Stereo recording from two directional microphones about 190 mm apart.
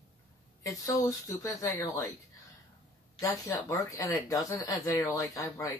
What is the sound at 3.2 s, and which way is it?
Speech, 15° left (ahead or behind).